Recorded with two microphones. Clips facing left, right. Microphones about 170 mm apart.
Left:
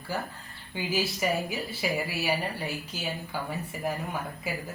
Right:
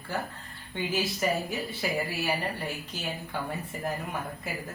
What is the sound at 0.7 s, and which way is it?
A woman's voice, 5° left (ahead or behind).